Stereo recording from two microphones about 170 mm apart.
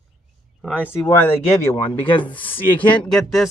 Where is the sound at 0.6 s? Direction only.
5° left (ahead or behind).